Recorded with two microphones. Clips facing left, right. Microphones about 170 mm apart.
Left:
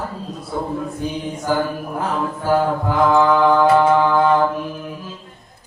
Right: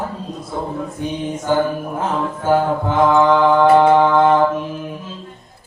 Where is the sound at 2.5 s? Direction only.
20° right (ahead or behind).